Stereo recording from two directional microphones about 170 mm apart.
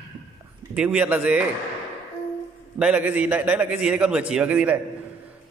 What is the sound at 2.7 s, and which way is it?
A man's voice, 5° right (ahead or behind).